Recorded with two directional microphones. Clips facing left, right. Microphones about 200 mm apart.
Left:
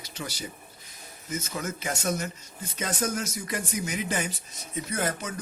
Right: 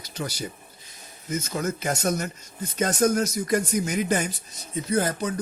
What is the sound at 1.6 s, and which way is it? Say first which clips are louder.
Speech: right 7 dB; 40° right (ahead or behind).